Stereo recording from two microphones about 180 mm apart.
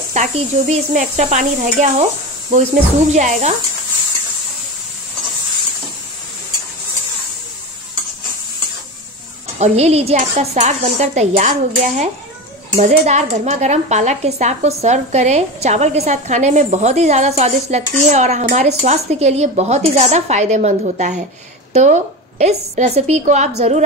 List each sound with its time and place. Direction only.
0.1 s speech: 45° right (ahead or behind)
3.1 s a woman's voice: 40° right (ahead or behind)
9.6 s a woman's voice: 40° right (ahead or behind)